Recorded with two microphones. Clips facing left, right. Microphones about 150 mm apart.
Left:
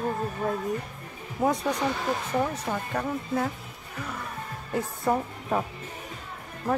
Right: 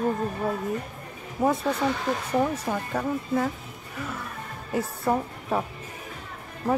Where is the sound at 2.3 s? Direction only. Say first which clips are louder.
Right 5 dB; 10° right (ahead or behind).